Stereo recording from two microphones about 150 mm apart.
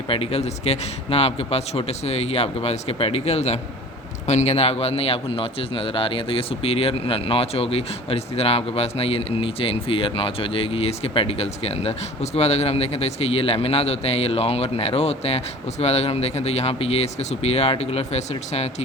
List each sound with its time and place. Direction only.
0.1 s a man's voice: 40° left (ahead or behind)